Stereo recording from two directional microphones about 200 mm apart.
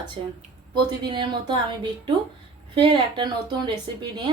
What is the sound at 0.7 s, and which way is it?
Speech, 25° right (ahead or behind).